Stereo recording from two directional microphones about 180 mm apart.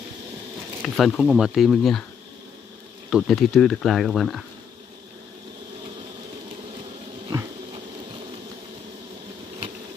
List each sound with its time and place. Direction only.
0.8 s speech: centre (ahead or behind)
3.1 s speech: centre (ahead or behind)
7.2 s a sound: 25° right (ahead or behind)